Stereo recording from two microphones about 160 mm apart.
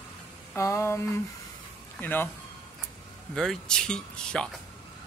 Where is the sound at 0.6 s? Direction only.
20° left (ahead or behind).